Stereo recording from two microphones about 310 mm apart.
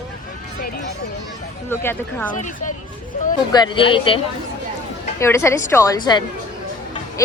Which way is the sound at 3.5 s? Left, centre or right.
Centre.